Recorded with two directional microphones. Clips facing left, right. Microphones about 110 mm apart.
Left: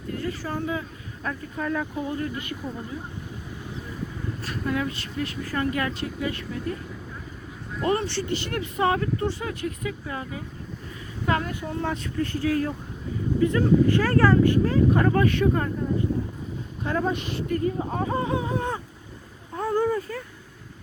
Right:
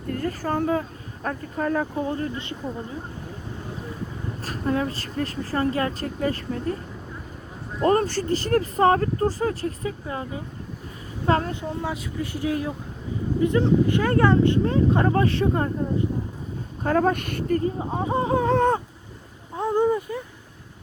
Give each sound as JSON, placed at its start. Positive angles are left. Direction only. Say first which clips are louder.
{"t": 0.1, "sound": "speech", "louder": "right 4 dB", "side_deg": -45}
{"t": 4.4, "sound": "speech", "louder": "right 3 dB", "side_deg": -35}
{"t": 7.8, "sound": "speech", "louder": "right 4 dB", "side_deg": -40}
{"t": 11.6, "sound": "speech", "louder": "even", "side_deg": -15}
{"t": 16.8, "sound": "speech", "louder": "right 5 dB", "side_deg": -50}
{"t": 17.6, "sound": "speech", "louder": "even", "side_deg": -20}
{"t": 18.4, "sound": "a sound", "louder": "right 8 dB", "side_deg": -65}
{"t": 19.5, "sound": "a sound", "louder": "right 2 dB", "side_deg": -20}